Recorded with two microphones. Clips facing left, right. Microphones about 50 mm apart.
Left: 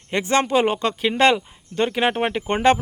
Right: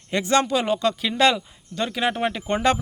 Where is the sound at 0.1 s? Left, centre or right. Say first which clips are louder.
Left 1 dB; left.